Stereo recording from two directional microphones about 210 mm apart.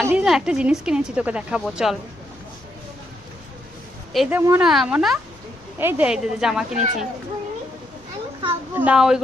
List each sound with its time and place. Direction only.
0.1 s a woman's voice: 5° right (ahead or behind)
4.1 s a woman's voice: 5° right (ahead or behind)
6.7 s speech: 35° right (ahead or behind)
8.7 s a woman's voice: 5° right (ahead or behind)